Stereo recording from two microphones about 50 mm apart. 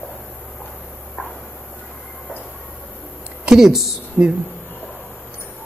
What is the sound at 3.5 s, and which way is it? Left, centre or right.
Speech, centre.